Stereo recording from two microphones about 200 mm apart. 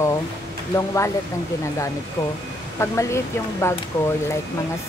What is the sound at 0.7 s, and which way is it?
Speech, 15° left (ahead or behind).